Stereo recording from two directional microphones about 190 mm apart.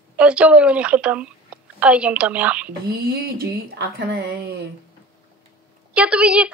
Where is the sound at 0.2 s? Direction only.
5° right (ahead or behind).